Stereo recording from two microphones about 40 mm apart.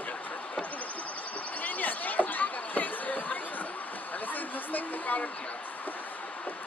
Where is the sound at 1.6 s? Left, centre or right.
Left.